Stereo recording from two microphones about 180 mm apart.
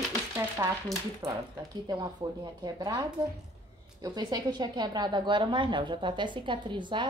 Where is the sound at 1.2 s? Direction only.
20° right (ahead or behind).